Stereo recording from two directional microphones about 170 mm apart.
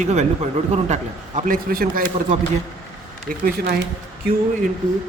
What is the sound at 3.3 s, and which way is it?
Speech, 65° right (ahead or behind).